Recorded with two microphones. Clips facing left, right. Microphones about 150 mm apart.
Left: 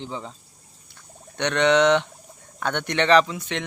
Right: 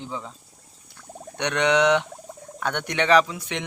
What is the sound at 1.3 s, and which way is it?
Speech, 10° right (ahead or behind).